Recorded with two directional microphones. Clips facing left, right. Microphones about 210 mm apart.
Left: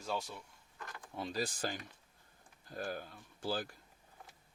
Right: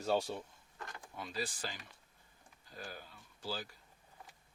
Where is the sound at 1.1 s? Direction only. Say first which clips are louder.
Left 4 dB; 35° left (ahead or behind); by 3.8 s 50° left (ahead or behind).